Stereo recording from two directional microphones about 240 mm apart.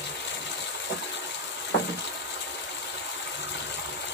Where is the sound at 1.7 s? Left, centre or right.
Left.